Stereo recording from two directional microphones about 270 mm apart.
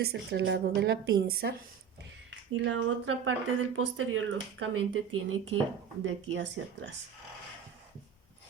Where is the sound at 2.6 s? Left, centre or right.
Right.